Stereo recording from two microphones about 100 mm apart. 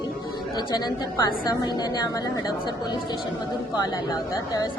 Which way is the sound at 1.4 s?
45° left (ahead or behind).